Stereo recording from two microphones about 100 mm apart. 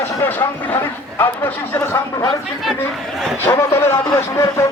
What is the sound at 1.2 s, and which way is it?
Speech, 20° left (ahead or behind).